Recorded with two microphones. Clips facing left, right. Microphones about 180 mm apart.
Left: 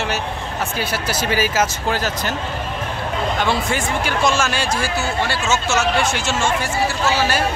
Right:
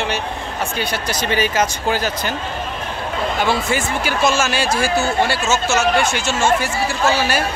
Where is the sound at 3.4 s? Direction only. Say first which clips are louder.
Right 3 dB; 5° right (ahead or behind).